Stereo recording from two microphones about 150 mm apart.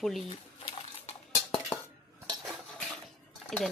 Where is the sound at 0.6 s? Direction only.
40° left (ahead or behind).